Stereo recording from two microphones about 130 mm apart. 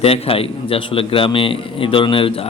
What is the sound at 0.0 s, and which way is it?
A man's voice, 50° left (ahead or behind).